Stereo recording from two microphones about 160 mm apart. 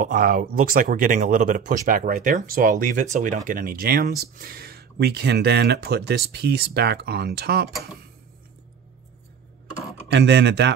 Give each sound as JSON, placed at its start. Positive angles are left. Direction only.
{"t": 0.0, "sound": "speech", "side_deg": -60}
{"t": 10.1, "sound": "speech", "side_deg": -90}